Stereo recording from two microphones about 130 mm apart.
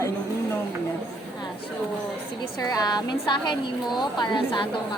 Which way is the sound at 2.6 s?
30° left (ahead or behind).